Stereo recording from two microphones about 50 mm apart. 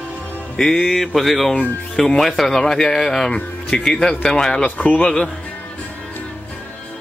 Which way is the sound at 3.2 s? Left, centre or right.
Centre.